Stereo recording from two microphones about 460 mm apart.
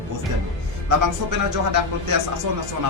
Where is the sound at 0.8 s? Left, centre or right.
Right.